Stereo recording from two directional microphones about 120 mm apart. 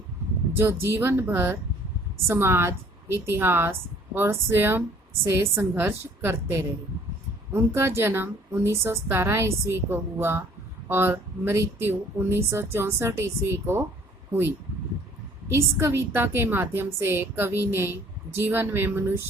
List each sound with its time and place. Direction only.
0.6 s a woman's voice: 20° right (ahead or behind)
15.4 s a woman's voice: 20° right (ahead or behind)